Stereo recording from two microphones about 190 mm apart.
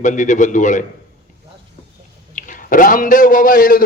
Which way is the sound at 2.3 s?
45° left (ahead or behind).